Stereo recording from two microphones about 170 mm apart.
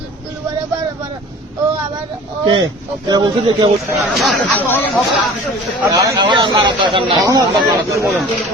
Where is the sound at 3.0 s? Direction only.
25° right (ahead or behind).